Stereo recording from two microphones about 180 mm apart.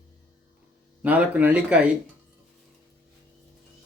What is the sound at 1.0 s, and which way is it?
Speech, 10° right (ahead or behind).